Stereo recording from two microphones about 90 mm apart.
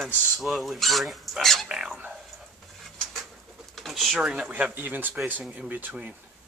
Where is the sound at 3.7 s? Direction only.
Centre (ahead or behind); by 6.1 s 15° right (ahead or behind).